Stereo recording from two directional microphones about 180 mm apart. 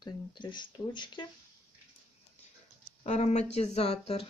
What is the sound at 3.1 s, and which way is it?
Speech, 40° left (ahead or behind).